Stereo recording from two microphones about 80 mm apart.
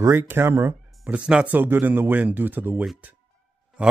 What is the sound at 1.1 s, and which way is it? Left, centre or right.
Speech, centre.